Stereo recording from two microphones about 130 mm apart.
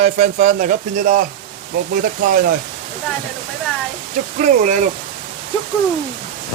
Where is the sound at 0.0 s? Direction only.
70° right (ahead or behind); by 1.2 s 90° right.